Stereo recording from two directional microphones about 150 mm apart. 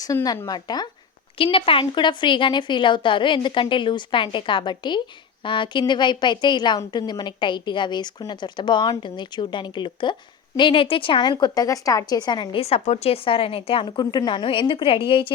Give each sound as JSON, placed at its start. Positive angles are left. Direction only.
{"t": 0.0, "sound": "a woman's voice", "side_deg": 20}